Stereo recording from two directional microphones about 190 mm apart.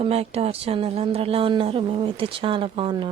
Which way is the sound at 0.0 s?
30° right (ahead or behind).